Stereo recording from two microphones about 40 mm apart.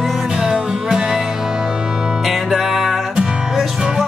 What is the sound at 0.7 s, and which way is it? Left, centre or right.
Music, centre.